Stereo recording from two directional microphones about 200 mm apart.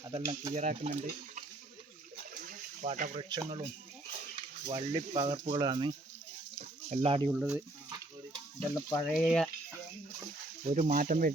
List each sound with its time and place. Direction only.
0.1 s speech: 30° right (ahead or behind)
2.3 s a sound: 45° right (ahead or behind)
3.2 s speech: 25° right (ahead or behind)
4.4 s a sound: 30° right (ahead or behind)
4.9 s speech: 25° right (ahead or behind)
6.9 s speech: 30° right (ahead or behind)
7.3 s speech: 5° right (ahead or behind)
9.0 s speech: centre (ahead or behind)
10.7 s speech: 35° right (ahead or behind)